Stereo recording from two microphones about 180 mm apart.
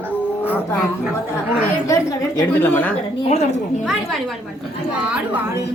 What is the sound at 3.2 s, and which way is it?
Speech, 35° left (ahead or behind).